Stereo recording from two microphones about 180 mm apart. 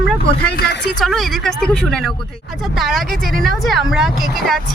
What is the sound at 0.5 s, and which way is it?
Speech, 70° left (ahead or behind).